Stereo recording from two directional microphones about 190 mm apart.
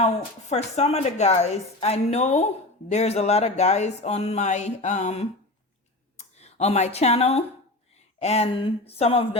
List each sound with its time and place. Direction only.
0.0 s a woman's voice: 35° left (ahead or behind)